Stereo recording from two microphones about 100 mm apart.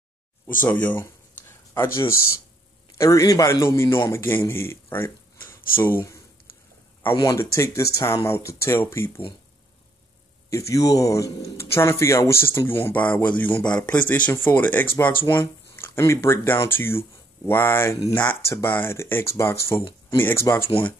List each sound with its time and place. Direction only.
0.6 s a sound: 15° left (ahead or behind)
3.0 s a man's voice: 35° left (ahead or behind)
7.2 s speech: 30° left (ahead or behind)
10.5 s speech: 30° left (ahead or behind)